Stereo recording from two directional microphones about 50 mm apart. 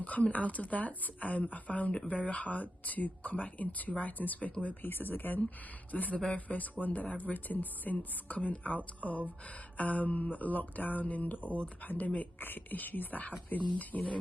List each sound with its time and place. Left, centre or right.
0.0 s speech: left